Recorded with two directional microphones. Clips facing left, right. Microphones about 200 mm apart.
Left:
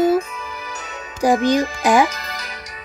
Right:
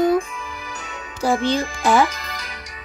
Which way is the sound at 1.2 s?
15° left (ahead or behind).